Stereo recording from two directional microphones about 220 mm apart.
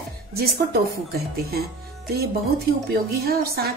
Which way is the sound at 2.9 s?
45° right (ahead or behind).